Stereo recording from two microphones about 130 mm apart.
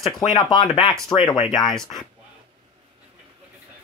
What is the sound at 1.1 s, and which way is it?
Speech, 35° left (ahead or behind).